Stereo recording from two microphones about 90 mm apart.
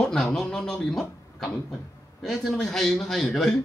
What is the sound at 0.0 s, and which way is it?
Speech, 5° left (ahead or behind).